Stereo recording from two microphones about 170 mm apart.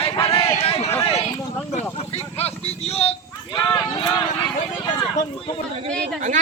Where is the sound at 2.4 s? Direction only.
35° left (ahead or behind).